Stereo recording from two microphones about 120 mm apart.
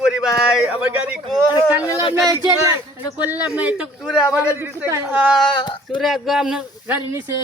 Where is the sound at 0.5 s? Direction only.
10° right (ahead or behind).